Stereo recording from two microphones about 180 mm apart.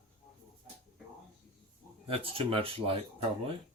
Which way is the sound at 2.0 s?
30° right (ahead or behind).